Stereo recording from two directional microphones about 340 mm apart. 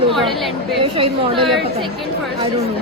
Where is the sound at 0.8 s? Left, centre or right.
Centre.